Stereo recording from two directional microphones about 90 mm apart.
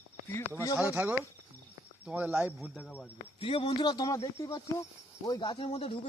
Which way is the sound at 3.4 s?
85° left.